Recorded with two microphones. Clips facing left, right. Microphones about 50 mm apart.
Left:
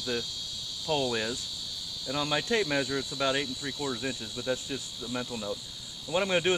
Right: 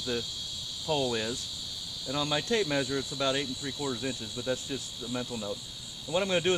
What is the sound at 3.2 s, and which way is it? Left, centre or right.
Speech, left.